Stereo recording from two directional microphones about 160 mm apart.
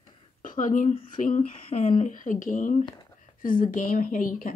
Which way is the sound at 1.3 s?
40° left (ahead or behind).